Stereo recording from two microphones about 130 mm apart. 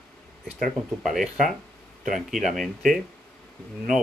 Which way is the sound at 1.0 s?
Centre (ahead or behind).